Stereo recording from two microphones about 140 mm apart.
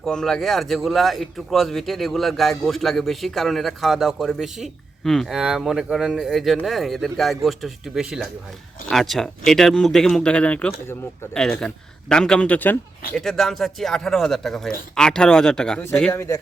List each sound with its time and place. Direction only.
0.0 s speech: 5° left (ahead or behind)
11.3 s speech: 5° left (ahead or behind)
13.1 s speech: centre (ahead or behind); by 16.4 s 20° left (ahead or behind)